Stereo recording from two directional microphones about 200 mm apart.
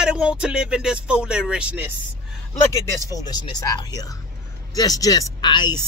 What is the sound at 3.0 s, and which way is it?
A woman's voice, 20° left (ahead or behind).